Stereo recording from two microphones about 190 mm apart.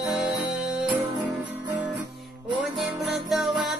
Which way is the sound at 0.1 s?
Centre (ahead or behind).